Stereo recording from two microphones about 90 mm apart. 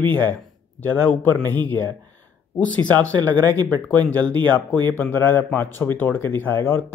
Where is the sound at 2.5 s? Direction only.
15° left (ahead or behind).